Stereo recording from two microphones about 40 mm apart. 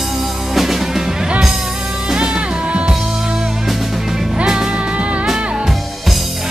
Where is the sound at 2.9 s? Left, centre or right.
Centre.